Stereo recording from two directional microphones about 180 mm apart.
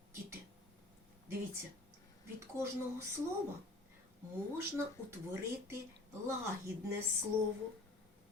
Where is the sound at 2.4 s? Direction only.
15° right (ahead or behind).